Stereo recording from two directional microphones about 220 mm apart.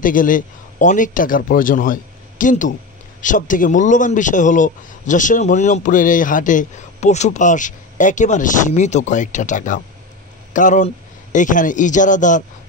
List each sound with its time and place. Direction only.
0.0 s a man's voice: 40° left (ahead or behind)